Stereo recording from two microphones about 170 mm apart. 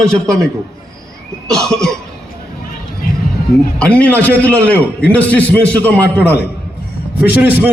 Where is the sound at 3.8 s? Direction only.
5° left (ahead or behind).